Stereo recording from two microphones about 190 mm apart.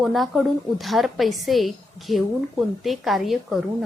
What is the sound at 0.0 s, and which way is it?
A woman's voice, centre (ahead or behind).